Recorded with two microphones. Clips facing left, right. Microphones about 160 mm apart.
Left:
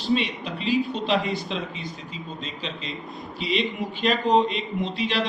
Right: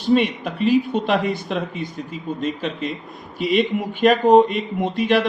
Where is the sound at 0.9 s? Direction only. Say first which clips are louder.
Right 4 dB; 50° right (ahead or behind).